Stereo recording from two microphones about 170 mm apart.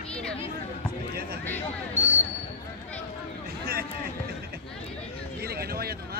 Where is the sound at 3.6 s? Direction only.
65° right (ahead or behind).